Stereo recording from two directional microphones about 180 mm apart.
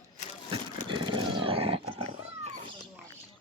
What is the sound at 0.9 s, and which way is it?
Wild animals, 25° right (ahead or behind).